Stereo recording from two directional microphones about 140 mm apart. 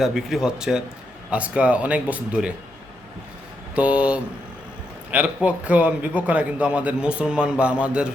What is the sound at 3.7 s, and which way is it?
A man's voice, 10° right (ahead or behind).